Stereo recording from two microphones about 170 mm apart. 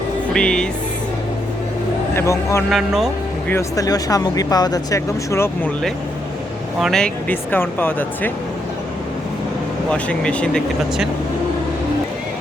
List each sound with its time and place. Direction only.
0.3 s speech: 5° left (ahead or behind)
2.1 s speech: 15° left (ahead or behind)
2.6 s speech: centre (ahead or behind)
3.5 s speech: 20° left (ahead or behind)
6.7 s speech: centre (ahead or behind)
9.9 s speech: 5° left (ahead or behind)